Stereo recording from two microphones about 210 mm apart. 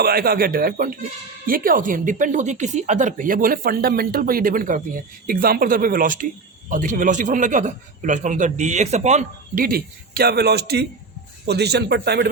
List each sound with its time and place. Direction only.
0.0 s speech: 45° right (ahead or behind)